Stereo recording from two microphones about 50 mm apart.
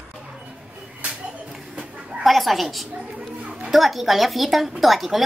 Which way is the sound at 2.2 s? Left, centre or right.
Centre.